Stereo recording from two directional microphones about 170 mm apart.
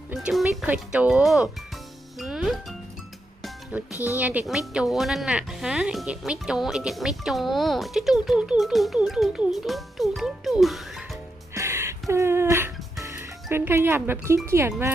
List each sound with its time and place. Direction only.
0.1 s a woman's voice: 5° right (ahead or behind)
3.4 s music: 10° right (ahead or behind)
4.1 s a woman's voice: 10° right (ahead or behind)
11.5 s music: 15° right (ahead or behind)
14.4 s speech: 15° right (ahead or behind)